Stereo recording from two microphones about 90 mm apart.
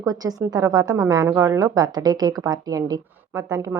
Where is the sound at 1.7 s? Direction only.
45° right (ahead or behind).